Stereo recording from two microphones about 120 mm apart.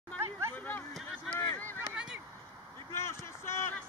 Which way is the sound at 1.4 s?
15° left (ahead or behind).